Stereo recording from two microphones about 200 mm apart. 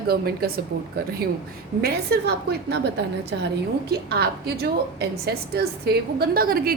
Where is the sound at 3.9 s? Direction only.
50° right (ahead or behind).